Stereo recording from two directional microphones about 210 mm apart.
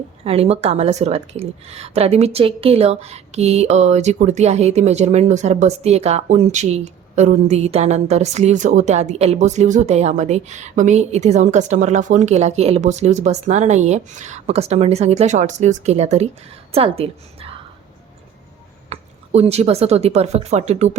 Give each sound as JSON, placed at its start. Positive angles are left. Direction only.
{"t": 0.3, "sound": "a woman's voice", "side_deg": -30}
{"t": 18.9, "sound": "speech", "side_deg": -30}